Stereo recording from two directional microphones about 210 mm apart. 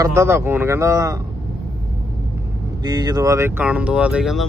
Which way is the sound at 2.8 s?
20° right (ahead or behind).